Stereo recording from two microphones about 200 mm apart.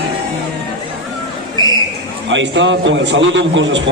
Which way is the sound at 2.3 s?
65° right (ahead or behind).